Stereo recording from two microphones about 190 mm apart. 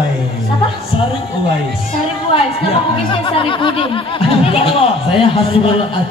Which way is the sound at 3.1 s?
25° left (ahead or behind).